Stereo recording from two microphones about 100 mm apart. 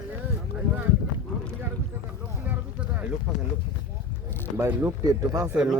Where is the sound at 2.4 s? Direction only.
15° right (ahead or behind).